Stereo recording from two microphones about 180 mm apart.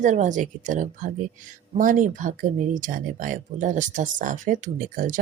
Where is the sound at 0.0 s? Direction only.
45° right (ahead or behind).